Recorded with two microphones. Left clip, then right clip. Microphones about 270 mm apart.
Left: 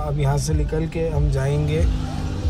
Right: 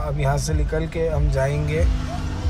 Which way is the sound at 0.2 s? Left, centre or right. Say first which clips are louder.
Right 1 dB; centre.